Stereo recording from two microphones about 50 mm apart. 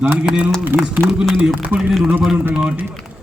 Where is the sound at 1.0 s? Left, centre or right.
Right.